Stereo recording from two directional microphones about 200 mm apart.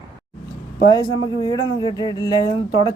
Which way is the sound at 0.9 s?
20° left (ahead or behind).